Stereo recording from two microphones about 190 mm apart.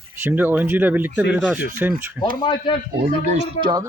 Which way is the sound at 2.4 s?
25° left (ahead or behind).